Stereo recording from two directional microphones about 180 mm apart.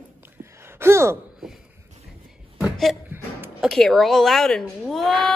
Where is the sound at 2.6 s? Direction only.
Centre (ahead or behind).